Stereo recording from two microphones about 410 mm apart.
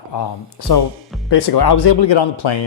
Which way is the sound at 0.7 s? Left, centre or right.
Left.